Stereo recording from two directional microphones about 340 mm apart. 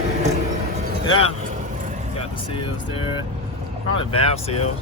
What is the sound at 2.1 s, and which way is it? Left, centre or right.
Speech, centre.